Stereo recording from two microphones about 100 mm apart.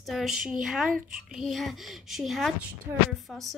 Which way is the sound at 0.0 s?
Centre (ahead or behind).